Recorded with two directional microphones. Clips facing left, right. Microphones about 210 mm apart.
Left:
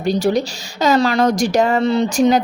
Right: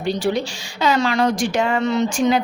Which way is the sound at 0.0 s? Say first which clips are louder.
Left 4 dB; 40° left (ahead or behind).